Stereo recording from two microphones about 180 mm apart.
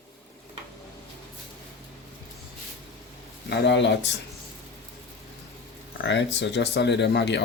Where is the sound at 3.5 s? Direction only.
70° left (ahead or behind).